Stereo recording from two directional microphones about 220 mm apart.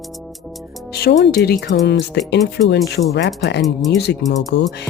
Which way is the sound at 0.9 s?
50° left (ahead or behind).